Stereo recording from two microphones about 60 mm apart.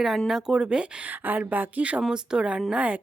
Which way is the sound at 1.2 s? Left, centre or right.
Right.